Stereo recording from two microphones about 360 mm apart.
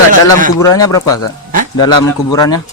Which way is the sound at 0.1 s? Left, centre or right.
Right.